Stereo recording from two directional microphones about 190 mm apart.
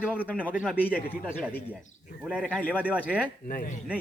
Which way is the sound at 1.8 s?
40° left (ahead or behind).